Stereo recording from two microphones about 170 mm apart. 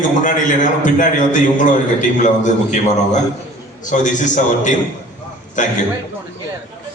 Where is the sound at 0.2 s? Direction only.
50° left (ahead or behind).